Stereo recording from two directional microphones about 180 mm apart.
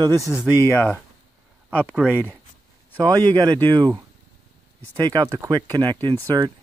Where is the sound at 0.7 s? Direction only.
15° left (ahead or behind).